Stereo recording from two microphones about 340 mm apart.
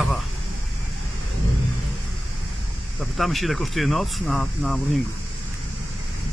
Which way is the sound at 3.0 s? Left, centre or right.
Centre.